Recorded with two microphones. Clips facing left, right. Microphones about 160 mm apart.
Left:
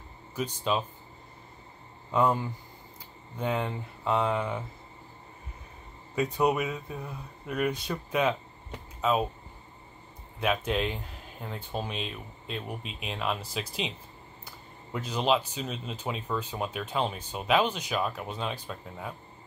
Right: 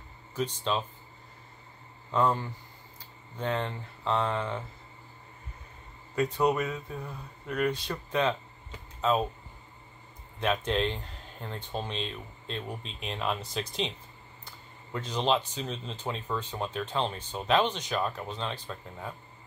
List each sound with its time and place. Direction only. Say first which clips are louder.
0.4 s speech: left 1 dB; 10° left (ahead or behind)
2.0 s speech: left 1 dB; 10° left (ahead or behind)
6.1 s speech: even; 10° left (ahead or behind)
10.4 s speech: even; 5° left (ahead or behind)